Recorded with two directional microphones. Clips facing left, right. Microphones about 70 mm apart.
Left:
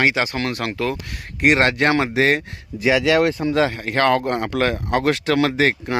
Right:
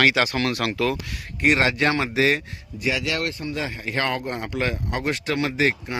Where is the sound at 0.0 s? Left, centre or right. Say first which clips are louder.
Even; left.